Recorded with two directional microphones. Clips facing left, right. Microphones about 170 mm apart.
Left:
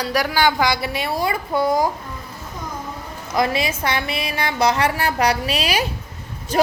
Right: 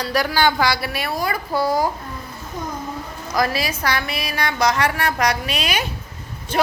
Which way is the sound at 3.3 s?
25° left (ahead or behind).